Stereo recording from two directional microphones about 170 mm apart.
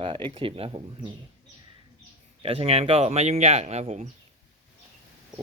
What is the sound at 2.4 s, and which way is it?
Speech, 35° right (ahead or behind).